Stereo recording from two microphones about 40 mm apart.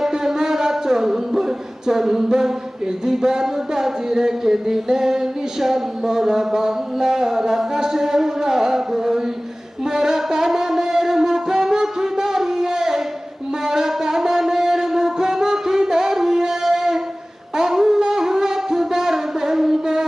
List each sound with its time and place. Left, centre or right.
0.0 s speech: centre
9.8 s a sound: centre
13.7 s music: centre